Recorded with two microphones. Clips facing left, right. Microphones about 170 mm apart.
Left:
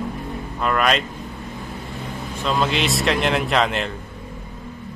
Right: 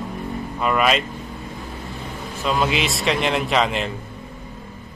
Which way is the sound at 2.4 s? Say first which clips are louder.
Even; 5° right (ahead or behind).